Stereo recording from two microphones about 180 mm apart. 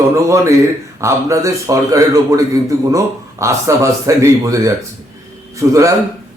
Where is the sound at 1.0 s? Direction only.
15° right (ahead or behind).